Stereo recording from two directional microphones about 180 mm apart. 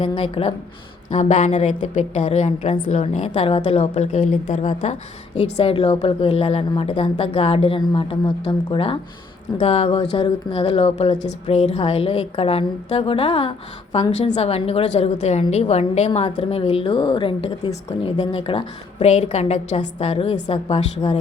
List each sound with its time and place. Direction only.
0.0 s a woman's voice: 30° left (ahead or behind)
5.4 s a woman's voice: 25° left (ahead or behind)
11.2 s a woman's voice: 40° left (ahead or behind)